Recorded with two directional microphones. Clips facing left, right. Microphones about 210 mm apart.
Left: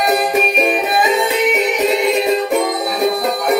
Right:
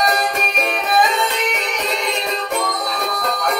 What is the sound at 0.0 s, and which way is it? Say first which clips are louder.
Music: left 5 dB; 5° left (ahead or behind).